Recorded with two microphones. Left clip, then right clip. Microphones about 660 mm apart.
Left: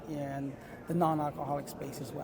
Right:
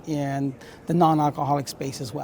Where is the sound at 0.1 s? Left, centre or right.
Right.